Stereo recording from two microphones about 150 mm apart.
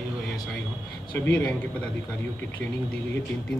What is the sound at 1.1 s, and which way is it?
Speech, 10° left (ahead or behind).